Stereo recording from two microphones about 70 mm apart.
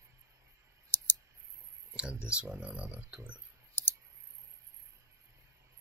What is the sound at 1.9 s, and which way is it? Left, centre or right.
Speech, centre.